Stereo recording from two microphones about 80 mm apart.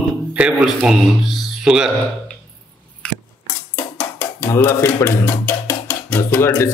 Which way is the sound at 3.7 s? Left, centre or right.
Centre.